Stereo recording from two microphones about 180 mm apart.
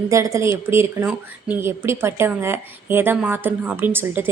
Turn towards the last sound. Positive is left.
turn(degrees=-10)  # may be behind; listen again after turning